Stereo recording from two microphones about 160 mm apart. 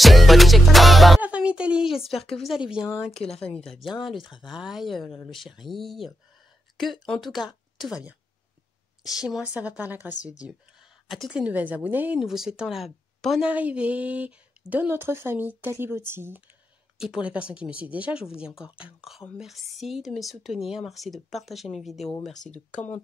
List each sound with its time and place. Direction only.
0.0 s music: centre (ahead or behind)
1.2 s a woman's voice: 10° right (ahead or behind)
3.1 s speech: 40° left (ahead or behind)
3.5 s speech: centre (ahead or behind)
4.2 s speech: 30° left (ahead or behind)
4.5 s a woman's voice: 5° right (ahead or behind)